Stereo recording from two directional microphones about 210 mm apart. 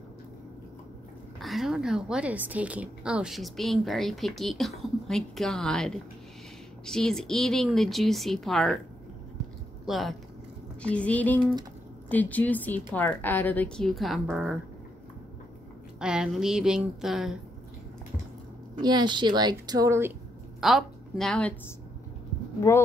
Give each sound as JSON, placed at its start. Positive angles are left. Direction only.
{"t": 1.4, "sound": "a woman's voice", "side_deg": 0}
{"t": 9.8, "sound": "a woman's voice", "side_deg": 0}
{"t": 16.0, "sound": "a woman's voice", "side_deg": -5}
{"t": 18.8, "sound": "speech", "side_deg": -20}
{"t": 20.6, "sound": "a woman's voice", "side_deg": 0}